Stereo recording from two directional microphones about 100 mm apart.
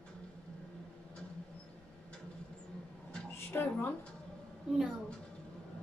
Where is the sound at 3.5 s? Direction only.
20° left (ahead or behind).